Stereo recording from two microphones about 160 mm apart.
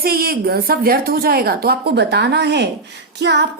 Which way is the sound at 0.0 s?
70° right (ahead or behind).